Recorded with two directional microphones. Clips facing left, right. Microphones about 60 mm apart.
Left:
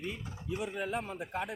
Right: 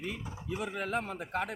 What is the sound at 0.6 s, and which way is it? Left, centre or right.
Speech, right.